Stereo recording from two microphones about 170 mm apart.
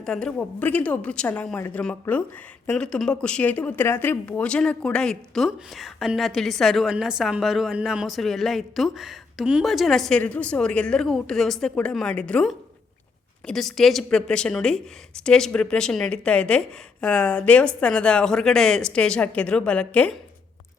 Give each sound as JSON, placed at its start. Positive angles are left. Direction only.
{"t": 0.0, "sound": "a woman's voice", "side_deg": 5}